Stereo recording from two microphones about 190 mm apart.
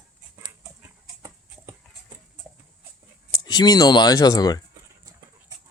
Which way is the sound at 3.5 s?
20° left (ahead or behind).